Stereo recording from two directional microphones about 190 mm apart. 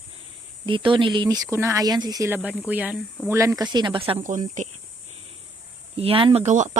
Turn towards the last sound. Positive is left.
turn(degrees=-40)  # may be behind; listen again after turning